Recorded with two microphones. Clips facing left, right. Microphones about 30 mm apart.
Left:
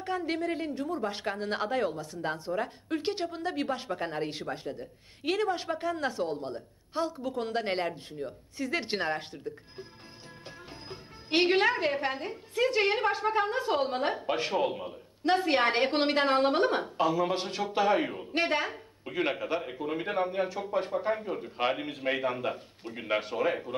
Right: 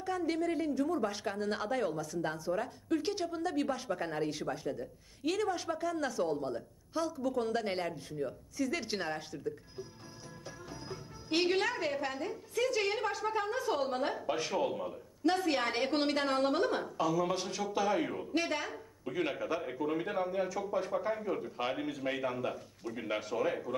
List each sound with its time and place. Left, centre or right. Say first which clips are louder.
0.0 s a woman's voice: left 2 dB; left
10.9 s a woman's voice: left 4 dB; left